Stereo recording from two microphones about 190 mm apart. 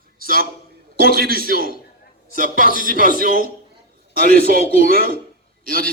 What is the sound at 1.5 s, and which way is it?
Speech, 55° left (ahead or behind).